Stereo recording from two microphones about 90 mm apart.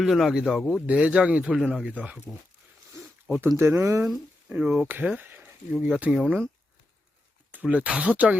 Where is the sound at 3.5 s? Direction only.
30° right (ahead or behind).